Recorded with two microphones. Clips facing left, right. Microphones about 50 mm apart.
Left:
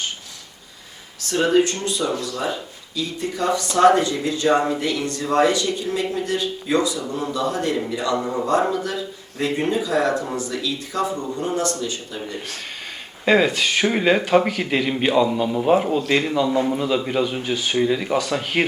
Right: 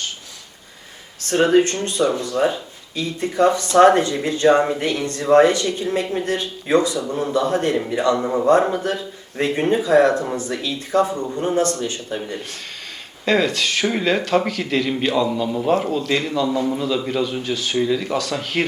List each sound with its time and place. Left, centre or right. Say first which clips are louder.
1.2 s speech: right 2 dB; right
13.2 s speech: left 1 dB; centre